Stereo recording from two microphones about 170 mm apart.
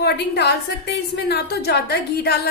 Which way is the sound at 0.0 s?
80° left.